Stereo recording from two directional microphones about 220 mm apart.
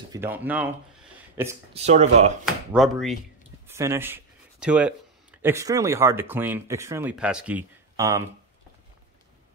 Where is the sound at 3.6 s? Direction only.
10° right (ahead or behind).